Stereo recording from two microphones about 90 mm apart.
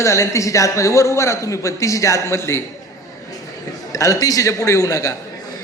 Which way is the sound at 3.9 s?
40° left (ahead or behind).